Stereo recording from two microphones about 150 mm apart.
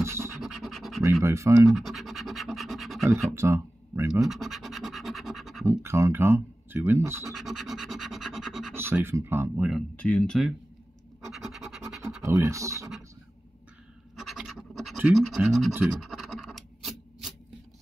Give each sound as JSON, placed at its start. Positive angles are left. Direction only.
{"t": 0.0, "sound": "scratch", "side_deg": -20}
{"t": 0.4, "sound": "scratch", "side_deg": 0}
{"t": 1.2, "sound": "speech", "side_deg": -20}
{"t": 1.7, "sound": "scratch", "side_deg": 0}
{"t": 3.3, "sound": "speech", "side_deg": -20}
{"t": 4.1, "sound": "scratch", "side_deg": 0}
{"t": 5.7, "sound": "speech", "side_deg": -20}
{"t": 7.3, "sound": "scratch", "side_deg": 0}
{"t": 8.7, "sound": "speech", "side_deg": -15}
{"t": 9.9, "sound": "speech", "side_deg": 5}
{"t": 11.1, "sound": "scratch", "side_deg": 0}
{"t": 12.0, "sound": "scratch", "side_deg": -20}
{"t": 14.1, "sound": "scratch", "side_deg": 0}